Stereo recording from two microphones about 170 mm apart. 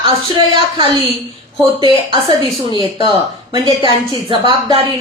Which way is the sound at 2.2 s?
30° left (ahead or behind).